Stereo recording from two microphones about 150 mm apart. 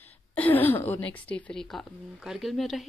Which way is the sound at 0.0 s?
10° left (ahead or behind).